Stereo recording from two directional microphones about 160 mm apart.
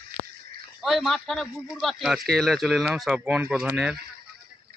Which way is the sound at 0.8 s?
Centre (ahead or behind).